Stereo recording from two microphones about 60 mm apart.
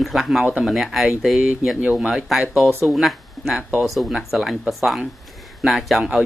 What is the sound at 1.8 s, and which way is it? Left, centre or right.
Speech, right.